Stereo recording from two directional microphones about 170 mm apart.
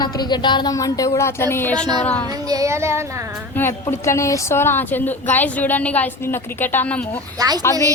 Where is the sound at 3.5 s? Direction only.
15° left (ahead or behind).